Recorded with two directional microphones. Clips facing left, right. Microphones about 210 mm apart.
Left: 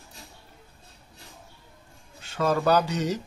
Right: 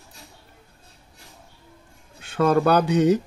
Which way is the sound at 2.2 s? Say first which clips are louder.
Right 5 dB; 55° right (ahead or behind).